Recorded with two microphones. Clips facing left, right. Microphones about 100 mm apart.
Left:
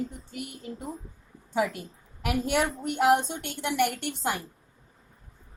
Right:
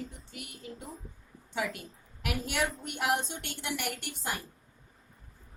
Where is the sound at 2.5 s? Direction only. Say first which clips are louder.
Left 5 dB; 50° left (ahead or behind).